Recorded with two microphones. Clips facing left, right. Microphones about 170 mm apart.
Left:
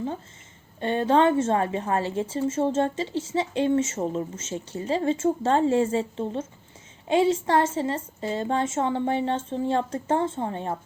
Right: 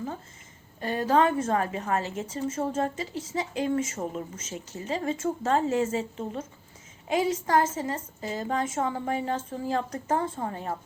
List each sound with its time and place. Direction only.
0.8 s a woman's voice: 25° left (ahead or behind)